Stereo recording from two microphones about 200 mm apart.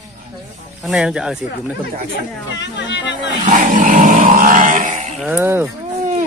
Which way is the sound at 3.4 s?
40° right (ahead or behind).